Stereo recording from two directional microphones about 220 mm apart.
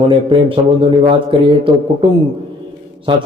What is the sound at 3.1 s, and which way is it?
Speech, 20° right (ahead or behind).